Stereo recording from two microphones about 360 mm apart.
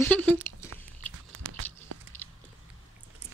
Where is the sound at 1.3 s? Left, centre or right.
Right.